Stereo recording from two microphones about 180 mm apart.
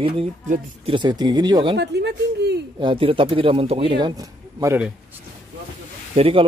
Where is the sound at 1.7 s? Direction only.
70° right (ahead or behind).